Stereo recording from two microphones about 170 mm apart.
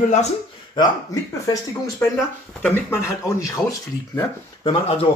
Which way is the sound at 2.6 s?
10° left (ahead or behind).